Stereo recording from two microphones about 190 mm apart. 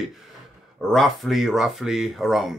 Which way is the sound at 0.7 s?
Centre (ahead or behind).